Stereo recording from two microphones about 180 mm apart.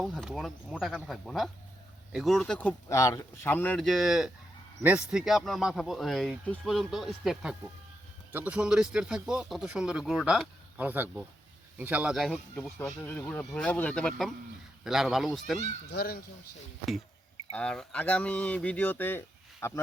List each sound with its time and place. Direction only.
0.0 s speech: centre (ahead or behind)
15.9 s speech: 60° left (ahead or behind)
17.5 s speech: 5° left (ahead or behind)